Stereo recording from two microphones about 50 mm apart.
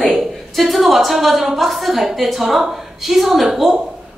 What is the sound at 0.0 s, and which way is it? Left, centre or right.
A woman's voice, centre.